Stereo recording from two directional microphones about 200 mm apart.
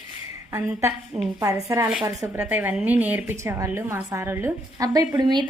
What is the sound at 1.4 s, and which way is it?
A woman's voice, 15° right (ahead or behind).